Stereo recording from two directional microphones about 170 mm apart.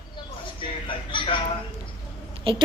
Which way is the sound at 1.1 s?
30° left (ahead or behind).